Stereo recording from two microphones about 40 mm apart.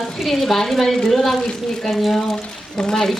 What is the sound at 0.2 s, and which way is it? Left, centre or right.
A woman's voice, centre.